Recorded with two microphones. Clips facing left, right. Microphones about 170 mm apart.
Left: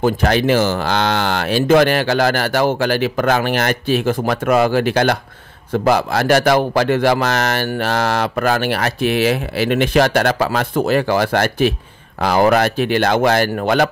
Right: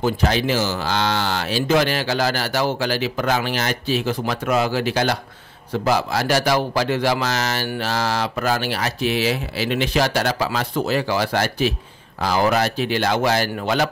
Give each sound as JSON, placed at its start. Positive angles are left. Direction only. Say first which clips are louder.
{"t": 0.0, "sound": "a man's voice", "louder": "left 5 dB", "side_deg": 55}